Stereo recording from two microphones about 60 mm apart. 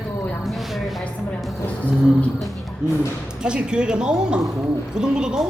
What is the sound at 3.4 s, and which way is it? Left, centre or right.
Speech, centre.